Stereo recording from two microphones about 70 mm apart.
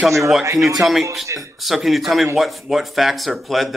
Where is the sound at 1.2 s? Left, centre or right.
Right.